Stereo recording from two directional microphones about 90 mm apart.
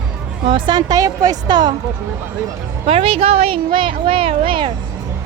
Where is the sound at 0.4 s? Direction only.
65° right (ahead or behind).